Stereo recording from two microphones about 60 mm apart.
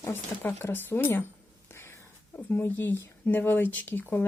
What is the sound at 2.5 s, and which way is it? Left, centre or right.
Speech, left.